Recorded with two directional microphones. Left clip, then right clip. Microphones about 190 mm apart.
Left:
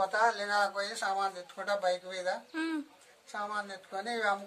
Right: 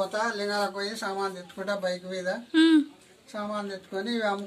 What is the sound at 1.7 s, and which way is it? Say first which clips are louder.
Speech: right 1 dB; 30° left (ahead or behind).